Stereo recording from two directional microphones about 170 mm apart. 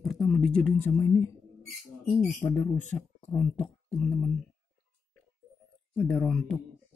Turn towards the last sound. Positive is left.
turn(degrees=5)  # may be behind; listen again after turning